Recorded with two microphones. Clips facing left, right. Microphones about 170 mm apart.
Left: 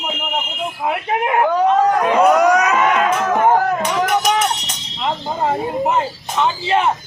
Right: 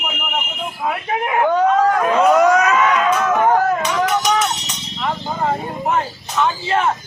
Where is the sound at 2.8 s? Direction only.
30° left (ahead or behind).